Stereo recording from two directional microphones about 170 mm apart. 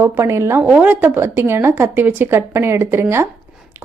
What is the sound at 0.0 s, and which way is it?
A woman's voice, 15° right (ahead or behind).